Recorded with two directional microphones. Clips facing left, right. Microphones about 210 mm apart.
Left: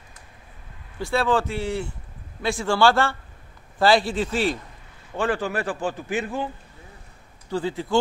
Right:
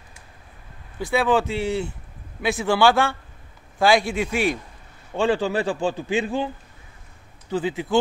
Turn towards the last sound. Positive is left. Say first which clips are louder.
# right 1 dB
turn(degrees=-20)  # may be behind; listen again after turning